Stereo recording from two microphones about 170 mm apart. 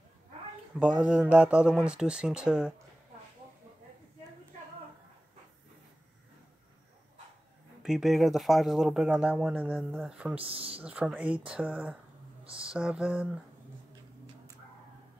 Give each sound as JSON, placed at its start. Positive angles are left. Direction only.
{"t": 0.9, "sound": "speech", "side_deg": -5}
{"t": 7.8, "sound": "speech", "side_deg": 0}
{"t": 10.4, "sound": "speech", "side_deg": -35}
{"t": 10.8, "sound": "speech", "side_deg": -5}
{"t": 12.4, "sound": "speech", "side_deg": -30}
{"t": 12.7, "sound": "speech", "side_deg": -5}